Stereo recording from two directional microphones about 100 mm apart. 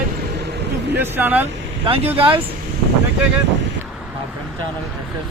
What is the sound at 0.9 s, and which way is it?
Speech, 20° right (ahead or behind).